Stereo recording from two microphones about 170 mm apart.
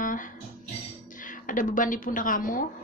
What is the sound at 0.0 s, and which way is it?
Music, 50° left (ahead or behind).